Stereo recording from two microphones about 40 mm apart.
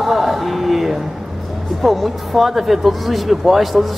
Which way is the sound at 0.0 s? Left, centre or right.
Centre.